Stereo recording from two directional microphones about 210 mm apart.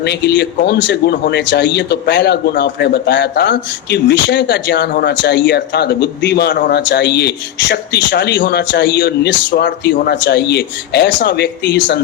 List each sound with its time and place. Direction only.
0.0 s speech: 50° left (ahead or behind)